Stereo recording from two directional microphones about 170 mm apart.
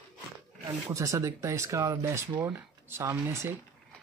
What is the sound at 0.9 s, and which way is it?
Speech, 20° right (ahead or behind).